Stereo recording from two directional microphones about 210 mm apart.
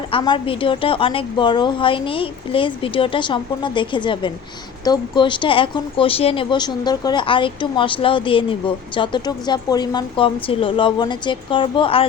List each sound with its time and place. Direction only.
0.1 s speech: 25° left (ahead or behind)